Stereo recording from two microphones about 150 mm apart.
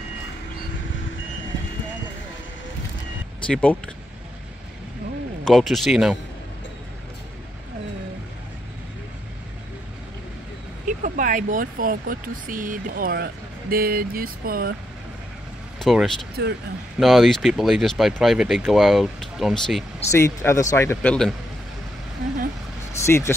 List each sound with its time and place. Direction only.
3.4 s speech: 5° left (ahead or behind)
5.4 s speech: centre (ahead or behind)
10.9 s speech: 60° right (ahead or behind)
15.8 s speech: centre (ahead or behind)
16.4 s speech: 90° right
17.0 s speech: centre (ahead or behind)
20.1 s speech: 20° left (ahead or behind)
22.9 s speech: 20° left (ahead or behind)